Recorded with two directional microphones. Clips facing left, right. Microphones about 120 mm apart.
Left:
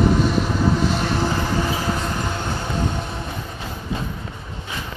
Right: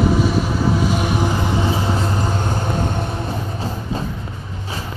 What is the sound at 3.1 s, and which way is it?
Vehicle, 35° right (ahead or behind).